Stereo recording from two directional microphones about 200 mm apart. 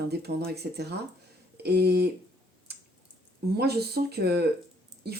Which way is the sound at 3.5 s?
50° right (ahead or behind).